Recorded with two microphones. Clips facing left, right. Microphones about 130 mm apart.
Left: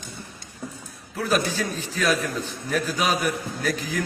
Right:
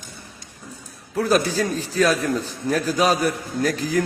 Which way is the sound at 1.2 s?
40° right (ahead or behind).